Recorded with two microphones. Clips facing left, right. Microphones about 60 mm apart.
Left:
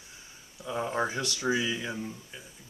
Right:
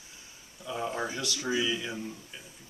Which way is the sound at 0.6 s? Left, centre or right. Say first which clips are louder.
Left 3 dB; left.